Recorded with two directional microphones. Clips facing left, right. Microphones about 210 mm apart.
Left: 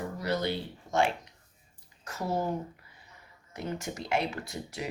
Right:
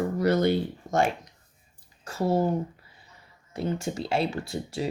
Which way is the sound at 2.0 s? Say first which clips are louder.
Right 7 dB; 30° right (ahead or behind).